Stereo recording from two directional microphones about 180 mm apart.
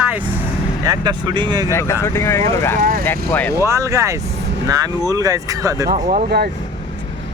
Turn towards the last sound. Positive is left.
turn(degrees=-40)  # may be behind; listen again after turning